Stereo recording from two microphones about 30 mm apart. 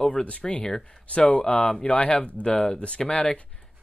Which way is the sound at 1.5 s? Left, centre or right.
Left.